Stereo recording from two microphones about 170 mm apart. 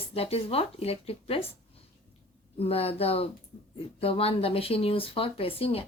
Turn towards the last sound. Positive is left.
turn(degrees=35)  # may be behind; listen again after turning